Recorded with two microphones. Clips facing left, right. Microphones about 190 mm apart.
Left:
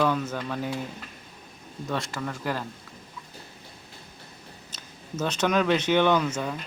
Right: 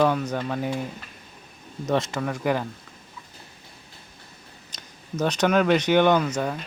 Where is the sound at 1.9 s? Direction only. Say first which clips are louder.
Right 6 dB; 20° right (ahead or behind).